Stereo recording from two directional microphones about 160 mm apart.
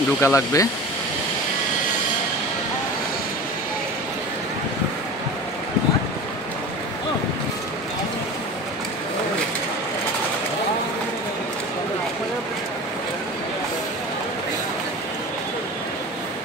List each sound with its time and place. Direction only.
0.2 s speech: 20° left (ahead or behind)